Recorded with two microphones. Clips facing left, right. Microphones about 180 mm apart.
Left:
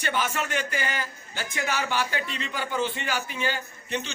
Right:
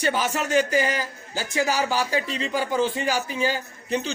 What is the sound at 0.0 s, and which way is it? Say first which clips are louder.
A man's voice: right 4 dB; 35° right (ahead or behind).